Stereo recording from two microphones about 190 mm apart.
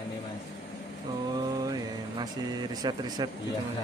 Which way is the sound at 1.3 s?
20° right (ahead or behind).